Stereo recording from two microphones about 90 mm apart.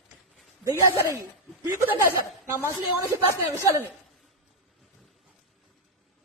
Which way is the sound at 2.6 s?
35° right (ahead or behind).